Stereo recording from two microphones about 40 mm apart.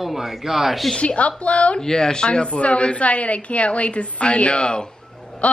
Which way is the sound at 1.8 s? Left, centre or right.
Centre.